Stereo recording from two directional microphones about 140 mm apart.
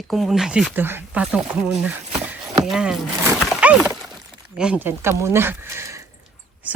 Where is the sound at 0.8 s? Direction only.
15° right (ahead or behind).